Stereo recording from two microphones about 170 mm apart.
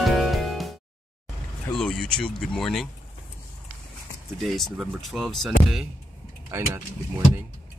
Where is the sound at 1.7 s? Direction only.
5° left (ahead or behind).